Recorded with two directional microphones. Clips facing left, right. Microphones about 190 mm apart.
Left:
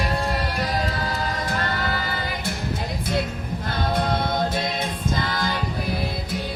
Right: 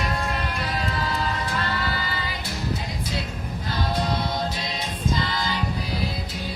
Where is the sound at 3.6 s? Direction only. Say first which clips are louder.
Left 2 dB; 55° left (ahead or behind).